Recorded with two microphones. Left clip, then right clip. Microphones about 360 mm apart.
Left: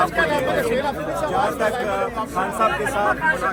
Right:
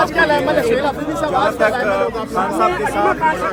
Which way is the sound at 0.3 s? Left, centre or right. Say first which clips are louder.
Right 5 dB; right.